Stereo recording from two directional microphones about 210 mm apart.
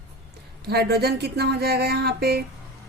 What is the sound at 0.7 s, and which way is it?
A woman's voice, 50° right (ahead or behind).